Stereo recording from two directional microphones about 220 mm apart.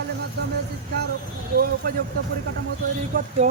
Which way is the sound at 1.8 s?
40° right (ahead or behind).